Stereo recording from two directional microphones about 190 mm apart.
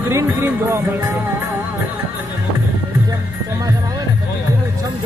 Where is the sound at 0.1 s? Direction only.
15° right (ahead or behind).